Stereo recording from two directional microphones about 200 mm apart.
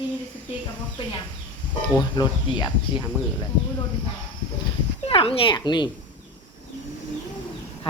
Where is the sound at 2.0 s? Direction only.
20° left (ahead or behind).